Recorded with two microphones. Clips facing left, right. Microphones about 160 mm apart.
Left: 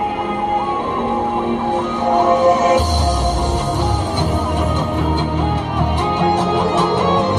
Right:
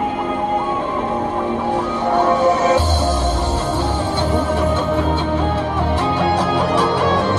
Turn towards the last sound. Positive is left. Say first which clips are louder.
# left 1 dB
turn(degrees=20)  # may be behind; listen again after turning